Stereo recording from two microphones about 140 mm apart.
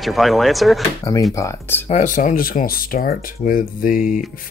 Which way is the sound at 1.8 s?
60° left (ahead or behind).